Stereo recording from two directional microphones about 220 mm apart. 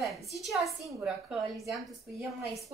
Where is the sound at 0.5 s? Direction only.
Centre (ahead or behind).